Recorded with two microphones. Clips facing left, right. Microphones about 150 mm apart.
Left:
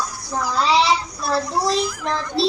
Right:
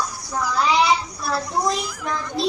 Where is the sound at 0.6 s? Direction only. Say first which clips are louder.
Left 1 dB; 30° left (ahead or behind).